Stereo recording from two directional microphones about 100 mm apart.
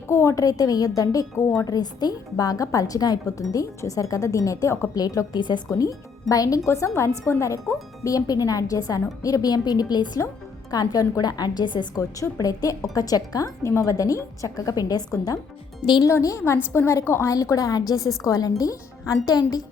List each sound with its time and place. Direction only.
0.1 s a woman's voice: 30° left (ahead or behind)
4.9 s a woman's voice: 40° left (ahead or behind)
5.6 s a woman's voice: 35° left (ahead or behind)
12.2 s a woman's voice: 35° left (ahead or behind)